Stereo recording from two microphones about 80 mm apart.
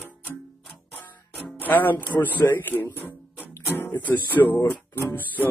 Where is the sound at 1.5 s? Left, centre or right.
Left.